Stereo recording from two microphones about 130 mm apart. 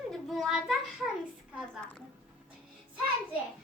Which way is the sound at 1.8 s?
10° left (ahead or behind).